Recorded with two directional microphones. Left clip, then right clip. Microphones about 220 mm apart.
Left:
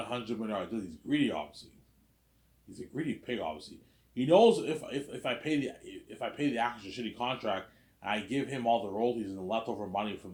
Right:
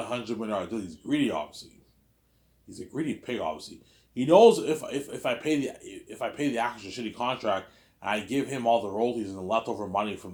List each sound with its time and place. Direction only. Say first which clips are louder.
0.0 s a man's voice: right 4 dB; 25° right (ahead or behind)
2.6 s a man's voice: right 5 dB; 25° right (ahead or behind)